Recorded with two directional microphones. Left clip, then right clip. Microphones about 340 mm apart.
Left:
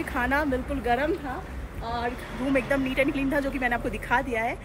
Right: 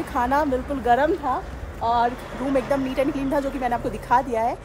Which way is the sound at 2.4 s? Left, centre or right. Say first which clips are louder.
Right 3 dB; right.